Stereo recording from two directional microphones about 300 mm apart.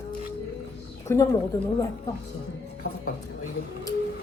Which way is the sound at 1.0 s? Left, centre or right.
Centre.